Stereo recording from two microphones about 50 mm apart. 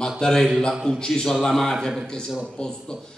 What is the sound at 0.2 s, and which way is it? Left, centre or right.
A man's voice, centre.